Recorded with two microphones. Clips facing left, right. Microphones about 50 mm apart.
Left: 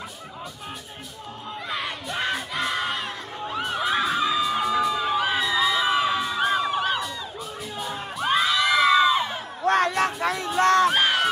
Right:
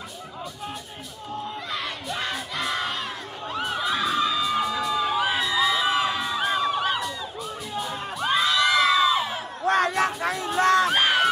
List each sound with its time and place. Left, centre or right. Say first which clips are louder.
1.7 s battle cry: left 4 dB; centre
4.0 s crowd: left 1 dB; centre
9.9 s music: left 1 dB; left